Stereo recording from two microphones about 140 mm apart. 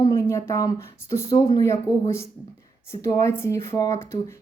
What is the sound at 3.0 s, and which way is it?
Speech, 20° left (ahead or behind).